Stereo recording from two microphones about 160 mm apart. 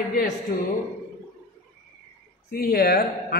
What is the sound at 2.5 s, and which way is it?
Speech, 70° left (ahead or behind).